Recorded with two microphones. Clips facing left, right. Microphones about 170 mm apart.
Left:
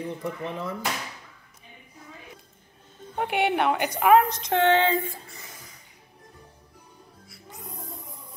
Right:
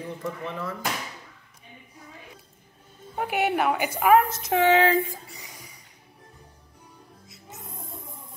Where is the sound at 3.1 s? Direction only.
Centre (ahead or behind).